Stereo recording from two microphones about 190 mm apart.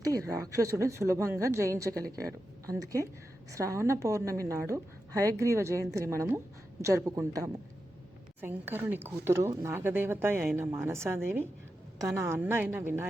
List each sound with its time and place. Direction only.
0.0 s a woman's voice: 15° right (ahead or behind)